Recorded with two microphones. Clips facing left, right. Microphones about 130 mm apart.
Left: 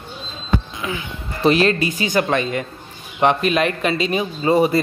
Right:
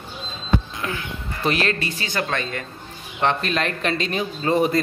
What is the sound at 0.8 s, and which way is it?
Music, 5° left (ahead or behind).